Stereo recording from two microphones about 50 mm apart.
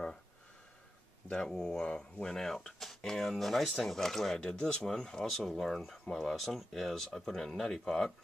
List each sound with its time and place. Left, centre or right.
1.3 s speech: centre
1.9 s speech: left
2.2 s speech: centre